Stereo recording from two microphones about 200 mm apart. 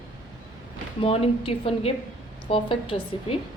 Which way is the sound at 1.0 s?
30° left (ahead or behind).